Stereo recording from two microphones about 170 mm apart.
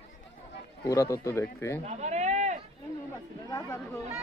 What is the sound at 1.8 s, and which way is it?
Sheep, 40° right (ahead or behind).